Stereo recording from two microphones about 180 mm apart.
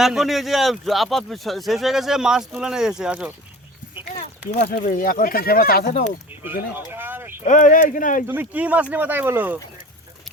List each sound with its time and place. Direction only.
0.0 s speech: centre (ahead or behind)
4.6 s speech: 50° left (ahead or behind)
6.7 s a sound: 10° right (ahead or behind)
7.4 s speech: 45° left (ahead or behind)
8.3 s speech: 10° right (ahead or behind)